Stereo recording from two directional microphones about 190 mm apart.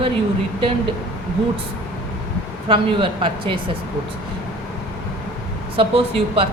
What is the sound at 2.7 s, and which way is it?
Speech, 25° right (ahead or behind).